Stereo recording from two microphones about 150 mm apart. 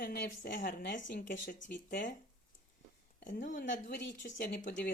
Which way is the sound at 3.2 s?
60° left (ahead or behind).